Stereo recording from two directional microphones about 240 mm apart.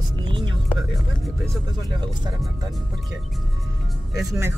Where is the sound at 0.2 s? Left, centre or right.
Centre.